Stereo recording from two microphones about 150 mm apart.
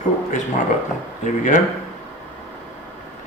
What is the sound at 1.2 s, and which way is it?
Speech, 55° left (ahead or behind).